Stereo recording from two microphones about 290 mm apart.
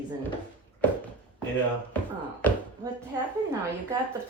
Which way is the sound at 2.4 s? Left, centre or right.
Centre.